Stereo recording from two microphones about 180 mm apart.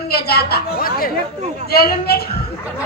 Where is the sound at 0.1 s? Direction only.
60° left (ahead or behind).